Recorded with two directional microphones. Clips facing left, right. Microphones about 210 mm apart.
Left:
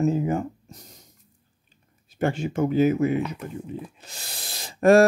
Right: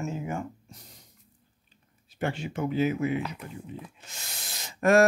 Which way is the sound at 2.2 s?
45° left (ahead or behind).